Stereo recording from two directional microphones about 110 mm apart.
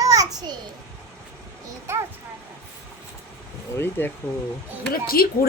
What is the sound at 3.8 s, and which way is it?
Speech, 20° left (ahead or behind).